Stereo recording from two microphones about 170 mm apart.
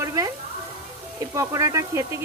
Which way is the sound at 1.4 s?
20° right (ahead or behind).